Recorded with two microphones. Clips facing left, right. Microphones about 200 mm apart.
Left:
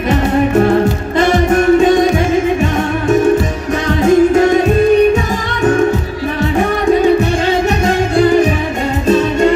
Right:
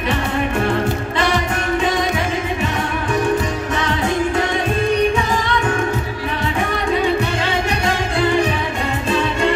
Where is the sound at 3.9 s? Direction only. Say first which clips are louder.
Left 12 dB; 45° left (ahead or behind).